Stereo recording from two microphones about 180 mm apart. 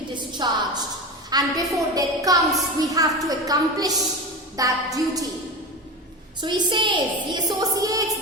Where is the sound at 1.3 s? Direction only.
20° right (ahead or behind).